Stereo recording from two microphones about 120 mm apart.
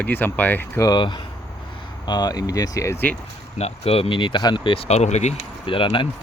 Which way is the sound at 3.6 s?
60° left (ahead or behind).